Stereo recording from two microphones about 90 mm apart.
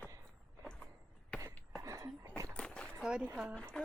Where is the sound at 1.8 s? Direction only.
35° right (ahead or behind).